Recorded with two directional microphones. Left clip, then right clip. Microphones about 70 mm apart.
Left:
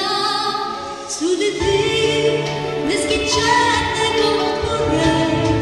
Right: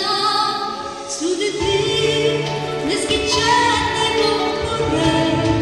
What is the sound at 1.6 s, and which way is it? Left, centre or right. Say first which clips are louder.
Music: even; centre.